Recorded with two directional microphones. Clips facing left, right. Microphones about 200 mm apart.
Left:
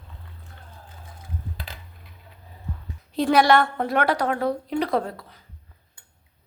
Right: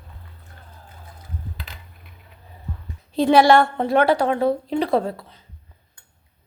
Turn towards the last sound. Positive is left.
turn(degrees=-25)  # may be behind; listen again after turning